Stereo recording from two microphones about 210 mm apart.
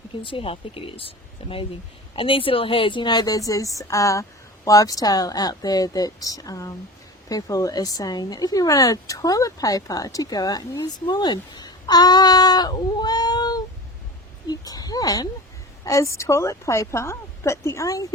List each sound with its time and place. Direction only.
0.2 s a woman's voice: 25° left (ahead or behind)
14.4 s a sound: 20° left (ahead or behind)
15.8 s a woman's voice: 15° left (ahead or behind)